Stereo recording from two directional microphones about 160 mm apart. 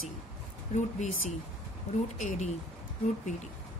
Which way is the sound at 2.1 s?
50° left (ahead or behind).